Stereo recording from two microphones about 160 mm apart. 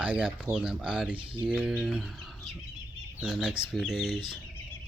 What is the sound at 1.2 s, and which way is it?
Speech, 30° right (ahead or behind).